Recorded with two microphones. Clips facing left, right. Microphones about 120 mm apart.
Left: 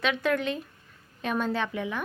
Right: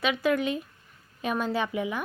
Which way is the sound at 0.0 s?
5° right (ahead or behind).